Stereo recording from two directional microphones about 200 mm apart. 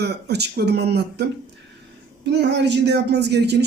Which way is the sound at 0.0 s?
55° right (ahead or behind).